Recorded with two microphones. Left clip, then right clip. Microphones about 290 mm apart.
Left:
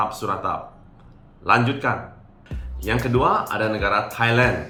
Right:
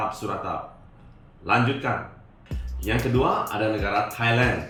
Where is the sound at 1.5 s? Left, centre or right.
Centre.